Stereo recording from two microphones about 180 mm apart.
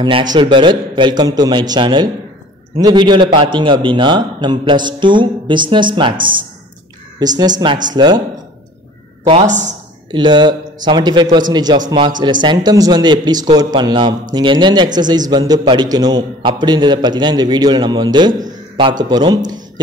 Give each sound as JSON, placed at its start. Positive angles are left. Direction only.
{"t": 0.0, "sound": "a man's voice", "side_deg": -25}
{"t": 9.2, "sound": "a woman's voice", "side_deg": -35}
{"t": 10.1, "sound": "a man's voice", "side_deg": -25}